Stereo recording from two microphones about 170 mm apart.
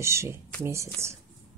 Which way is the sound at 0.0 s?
15° right (ahead or behind).